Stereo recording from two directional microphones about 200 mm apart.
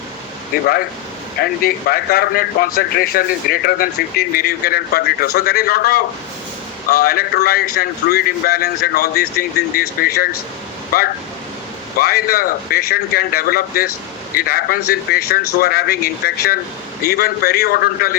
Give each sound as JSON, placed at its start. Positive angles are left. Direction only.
{"t": 0.5, "sound": "speech", "side_deg": 50}